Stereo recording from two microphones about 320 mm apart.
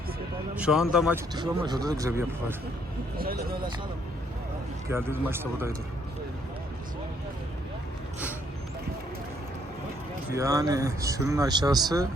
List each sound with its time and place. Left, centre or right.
0.5 s speech: centre
3.2 s speech: right
4.9 s speech: centre
10.3 s speech: centre